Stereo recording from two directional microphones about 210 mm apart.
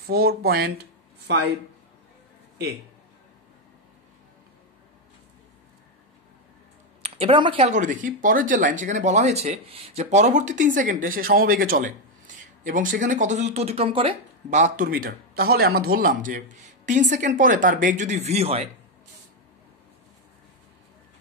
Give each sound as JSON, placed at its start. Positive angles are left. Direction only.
{"t": 0.0, "sound": "speech", "side_deg": -45}
{"t": 7.0, "sound": "speech", "side_deg": -25}
{"t": 14.6, "sound": "speech", "side_deg": -40}